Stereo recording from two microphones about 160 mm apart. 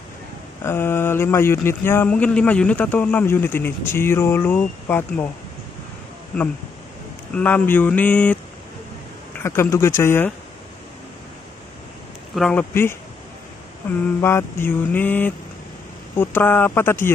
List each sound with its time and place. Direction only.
0.7 s speech: 15° left (ahead or behind)
7.3 s speech: 10° left (ahead or behind)
9.4 s speech: 15° left (ahead or behind)
12.4 s speech: 5° left (ahead or behind)
14.2 s speech: 15° left (ahead or behind)